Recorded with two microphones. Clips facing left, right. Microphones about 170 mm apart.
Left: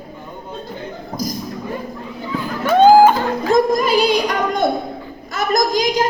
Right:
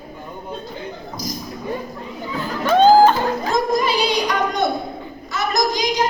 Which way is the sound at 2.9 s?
15° left (ahead or behind).